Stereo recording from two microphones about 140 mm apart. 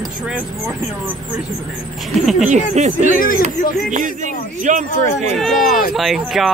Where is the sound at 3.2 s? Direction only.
80° left.